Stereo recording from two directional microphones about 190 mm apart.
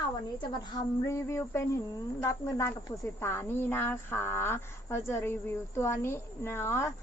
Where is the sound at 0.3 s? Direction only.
25° left (ahead or behind).